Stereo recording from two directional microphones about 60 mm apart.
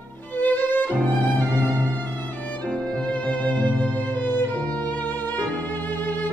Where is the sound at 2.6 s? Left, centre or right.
Left.